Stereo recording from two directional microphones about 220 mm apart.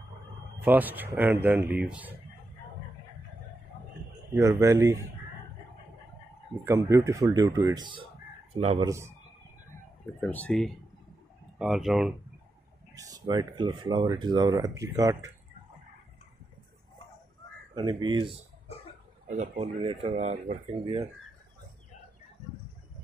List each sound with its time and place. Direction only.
0.7 s speech: 10° right (ahead or behind)
4.4 s speech: 15° right (ahead or behind)
6.6 s speech: 15° right (ahead or behind)
8.5 s speech: 30° right (ahead or behind)
8.8 s speech: 10° right (ahead or behind)
10.2 s speech: 5° left (ahead or behind)
12.9 s speech: 15° right (ahead or behind)
17.7 s speech: 20° right (ahead or behind)
19.2 s speech: 30° right (ahead or behind)
20.2 s speech: 35° right (ahead or behind)